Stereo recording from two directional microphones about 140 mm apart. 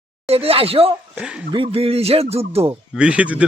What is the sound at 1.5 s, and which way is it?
Speech, 40° right (ahead or behind).